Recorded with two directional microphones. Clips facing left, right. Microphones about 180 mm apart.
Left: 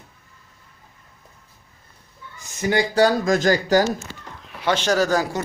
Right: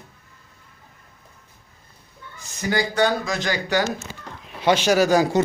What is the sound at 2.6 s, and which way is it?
Speech, 25° left (ahead or behind).